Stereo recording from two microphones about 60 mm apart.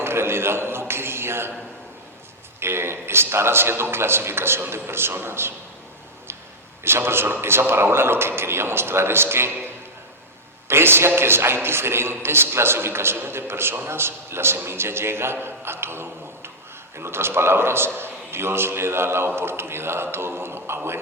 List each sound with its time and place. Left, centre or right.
0.0 s a man's voice: right
2.6 s a man's voice: right
6.8 s a man's voice: right
10.7 s a man's voice: right